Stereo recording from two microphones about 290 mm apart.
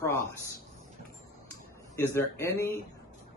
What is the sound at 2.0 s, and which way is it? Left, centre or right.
Speech, centre.